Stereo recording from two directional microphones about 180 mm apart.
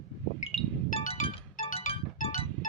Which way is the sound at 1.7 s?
35° left (ahead or behind).